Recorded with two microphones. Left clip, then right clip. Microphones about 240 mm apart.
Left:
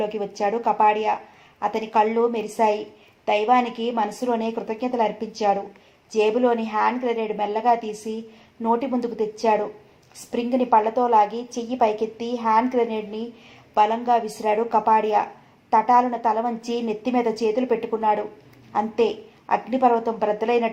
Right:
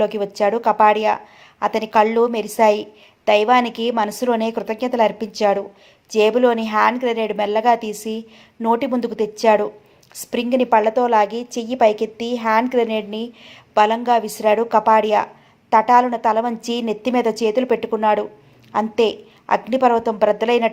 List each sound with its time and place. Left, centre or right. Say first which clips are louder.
0.0 s a woman's voice: right 6 dB; right